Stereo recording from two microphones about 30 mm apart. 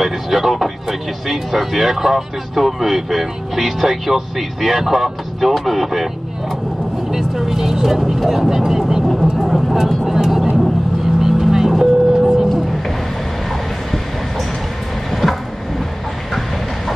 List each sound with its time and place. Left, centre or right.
0.0 s speech: centre
7.1 s speech: centre
9.0 s speech: centre
10.0 s speech: centre
11.1 s vehicle: centre
15.0 s train: centre